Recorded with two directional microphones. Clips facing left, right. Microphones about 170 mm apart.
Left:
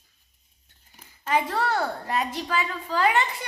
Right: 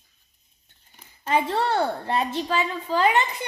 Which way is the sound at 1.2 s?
25° right (ahead or behind).